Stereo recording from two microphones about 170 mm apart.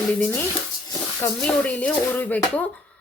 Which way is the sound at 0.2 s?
10° left (ahead or behind).